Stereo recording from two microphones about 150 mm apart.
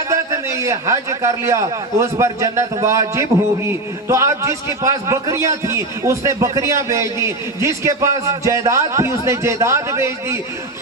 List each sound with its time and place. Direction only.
0.1 s a man's voice: 20° right (ahead or behind)